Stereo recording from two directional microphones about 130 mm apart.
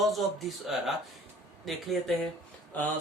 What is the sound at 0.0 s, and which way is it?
Speech, centre (ahead or behind).